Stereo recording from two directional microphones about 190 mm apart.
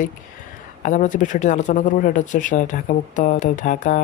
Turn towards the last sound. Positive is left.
turn(degrees=45)  # may be behind; listen again after turning